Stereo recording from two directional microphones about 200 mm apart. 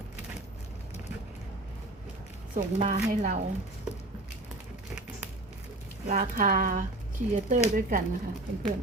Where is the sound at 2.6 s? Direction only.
40° right (ahead or behind).